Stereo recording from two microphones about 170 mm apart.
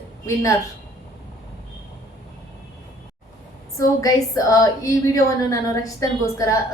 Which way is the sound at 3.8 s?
20° left (ahead or behind).